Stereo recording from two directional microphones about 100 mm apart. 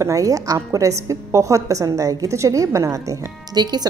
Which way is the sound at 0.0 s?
35° right (ahead or behind).